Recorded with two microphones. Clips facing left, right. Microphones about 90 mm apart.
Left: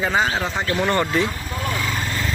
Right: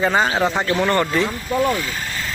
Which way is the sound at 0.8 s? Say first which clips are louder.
Even; 15° left (ahead or behind).